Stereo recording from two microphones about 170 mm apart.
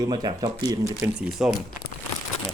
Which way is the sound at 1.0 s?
5° right (ahead or behind).